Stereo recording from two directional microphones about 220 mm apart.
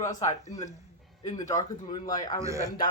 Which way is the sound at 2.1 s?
15° left (ahead or behind).